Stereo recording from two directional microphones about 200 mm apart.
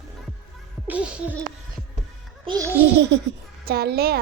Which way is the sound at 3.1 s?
60° right (ahead or behind).